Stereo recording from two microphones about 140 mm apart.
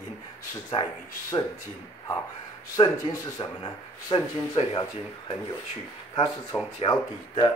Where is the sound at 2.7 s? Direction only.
30° left (ahead or behind).